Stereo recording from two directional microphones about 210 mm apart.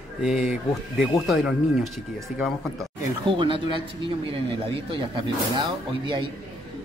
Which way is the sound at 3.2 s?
25° right (ahead or behind).